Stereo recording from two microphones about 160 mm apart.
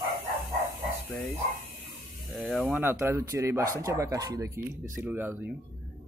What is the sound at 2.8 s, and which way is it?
Speech, 15° right (ahead or behind).